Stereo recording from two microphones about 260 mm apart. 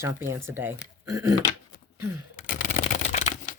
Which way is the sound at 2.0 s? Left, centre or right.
Right.